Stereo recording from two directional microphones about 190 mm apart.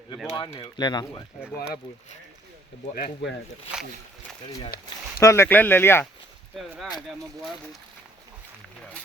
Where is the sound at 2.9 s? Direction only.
60° left (ahead or behind).